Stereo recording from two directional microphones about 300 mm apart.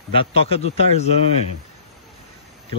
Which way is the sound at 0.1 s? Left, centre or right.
Centre.